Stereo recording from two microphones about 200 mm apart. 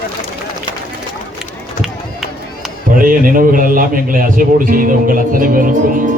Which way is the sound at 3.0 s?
45° right (ahead or behind).